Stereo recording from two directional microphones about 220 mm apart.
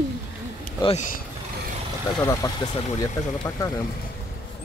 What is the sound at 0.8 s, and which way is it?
Speech, 30° left (ahead or behind).